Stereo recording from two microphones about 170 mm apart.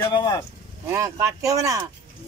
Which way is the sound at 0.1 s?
25° left (ahead or behind).